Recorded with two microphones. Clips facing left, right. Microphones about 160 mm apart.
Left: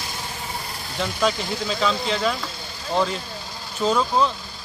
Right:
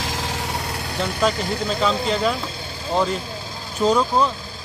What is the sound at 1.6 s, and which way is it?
Speech, 5° right (ahead or behind).